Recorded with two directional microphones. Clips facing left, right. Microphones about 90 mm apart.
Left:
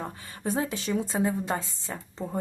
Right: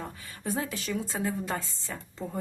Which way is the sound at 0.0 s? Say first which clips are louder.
Left 4 dB; 30° left (ahead or behind).